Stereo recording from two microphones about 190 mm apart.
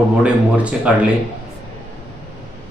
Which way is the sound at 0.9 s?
5° right (ahead or behind).